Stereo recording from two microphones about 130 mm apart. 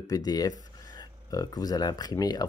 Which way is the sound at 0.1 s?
30° left (ahead or behind).